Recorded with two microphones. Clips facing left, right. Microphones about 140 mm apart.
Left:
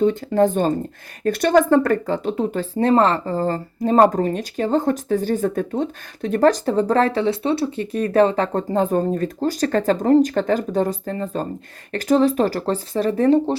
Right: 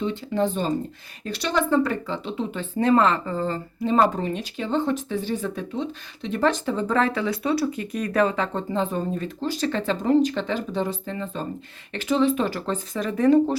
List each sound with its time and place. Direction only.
0.0 s speech: 45° left (ahead or behind); by 13.6 s 30° left (ahead or behind)